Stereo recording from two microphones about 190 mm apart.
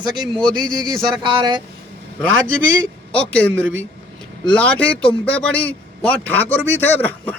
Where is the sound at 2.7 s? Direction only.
5° left (ahead or behind).